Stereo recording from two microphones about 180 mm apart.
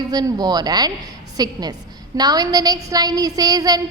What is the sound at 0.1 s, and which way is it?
A woman's voice, 20° right (ahead or behind).